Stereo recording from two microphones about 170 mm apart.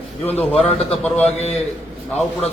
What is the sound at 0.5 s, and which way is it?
Speech, 35° left (ahead or behind).